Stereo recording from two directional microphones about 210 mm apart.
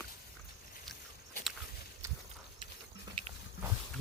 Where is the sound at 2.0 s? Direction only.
15° right (ahead or behind).